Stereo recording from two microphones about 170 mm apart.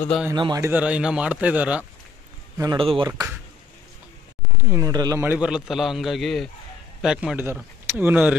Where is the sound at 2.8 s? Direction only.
35° right (ahead or behind).